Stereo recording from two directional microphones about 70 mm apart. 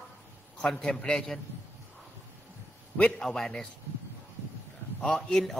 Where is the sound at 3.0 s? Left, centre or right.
Left.